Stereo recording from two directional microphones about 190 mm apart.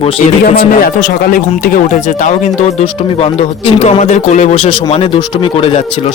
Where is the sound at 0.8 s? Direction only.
45° left (ahead or behind).